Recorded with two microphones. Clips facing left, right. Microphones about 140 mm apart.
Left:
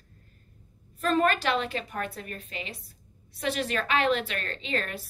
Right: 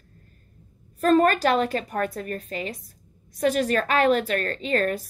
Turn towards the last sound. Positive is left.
turn(degrees=-45)  # may be behind; listen again after turning